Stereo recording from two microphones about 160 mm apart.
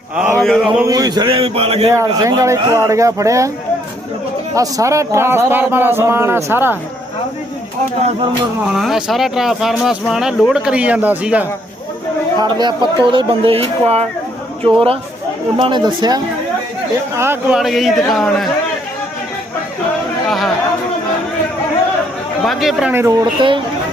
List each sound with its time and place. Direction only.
0.3 s mantra: 5° left (ahead or behind)
0.8 s speech: 20° right (ahead or behind)
2.1 s speech: 20° right (ahead or behind)
4.5 s a man's voice: 20° right (ahead or behind)
8.6 s speech: centre (ahead or behind)
12.4 s speech: 25° right (ahead or behind)
17.2 s a man's voice: 15° right (ahead or behind)
17.6 s speech: centre (ahead or behind)
20.2 s speech: centre (ahead or behind)
22.4 s speech: centre (ahead or behind)
22.9 s a man's voice: 15° right (ahead or behind)